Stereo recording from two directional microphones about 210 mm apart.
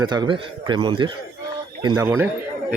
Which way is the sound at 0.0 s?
20° right (ahead or behind).